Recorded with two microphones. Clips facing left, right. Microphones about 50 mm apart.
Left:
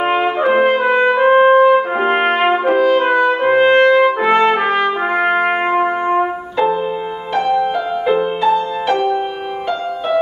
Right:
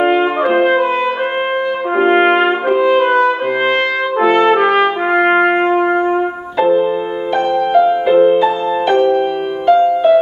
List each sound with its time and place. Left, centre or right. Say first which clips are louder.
0.4 s brass instrument: right 1 dB; centre
0.8 s brass instrument: left 3 dB; left
2.0 s brass instrument: right 4 dB; centre
3.2 s music: even; centre
3.9 s brass instrument: left 2 dB; centre
4.4 s trumpet: right 2 dB; centre
7.7 s music: right 6 dB; centre